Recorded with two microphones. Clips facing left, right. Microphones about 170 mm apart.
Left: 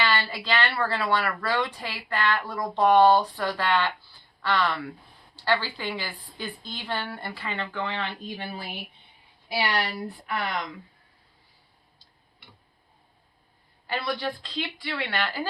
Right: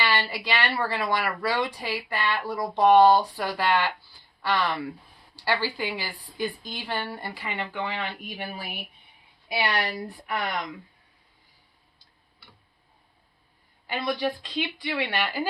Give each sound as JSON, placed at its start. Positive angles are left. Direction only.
{"t": 0.0, "sound": "speech", "side_deg": -10}
{"t": 9.7, "sound": "speech", "side_deg": -15}
{"t": 13.8, "sound": "speech", "side_deg": -15}